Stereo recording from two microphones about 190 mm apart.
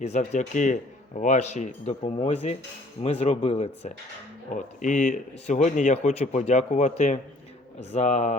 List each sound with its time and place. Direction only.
0.0 s speech: 35° left (ahead or behind)